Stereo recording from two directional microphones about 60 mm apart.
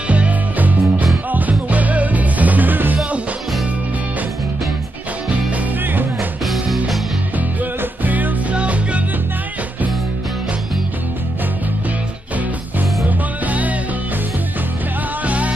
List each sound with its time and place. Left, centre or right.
0.1 s music: right
6.4 s music: centre
8.0 s music: right
13.0 s music: right
15.2 s music: right